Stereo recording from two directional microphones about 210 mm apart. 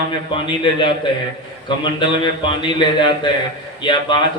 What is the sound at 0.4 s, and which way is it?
Speech, 20° left (ahead or behind).